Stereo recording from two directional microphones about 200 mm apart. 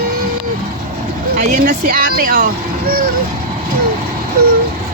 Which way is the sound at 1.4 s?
45° right (ahead or behind).